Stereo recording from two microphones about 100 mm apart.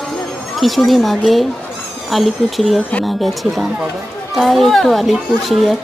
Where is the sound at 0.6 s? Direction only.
Centre (ahead or behind).